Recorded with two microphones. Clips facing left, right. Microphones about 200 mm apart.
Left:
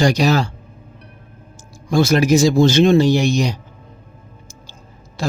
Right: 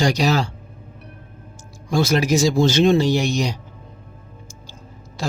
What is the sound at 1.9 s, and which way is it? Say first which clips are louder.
Speech: left 4 dB; 55° left (ahead or behind).